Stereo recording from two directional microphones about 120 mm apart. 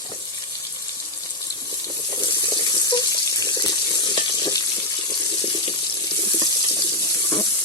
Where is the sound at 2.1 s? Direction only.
35° left (ahead or behind).